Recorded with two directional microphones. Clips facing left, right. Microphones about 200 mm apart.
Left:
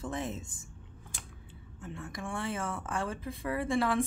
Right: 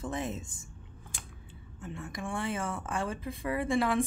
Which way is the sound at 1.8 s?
15° right (ahead or behind).